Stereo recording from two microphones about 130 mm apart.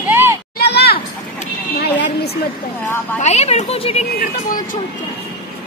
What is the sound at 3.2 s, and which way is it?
Speech, 55° left (ahead or behind).